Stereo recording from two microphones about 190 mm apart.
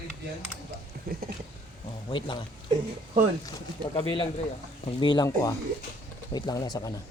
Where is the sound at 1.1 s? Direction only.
50° right (ahead or behind).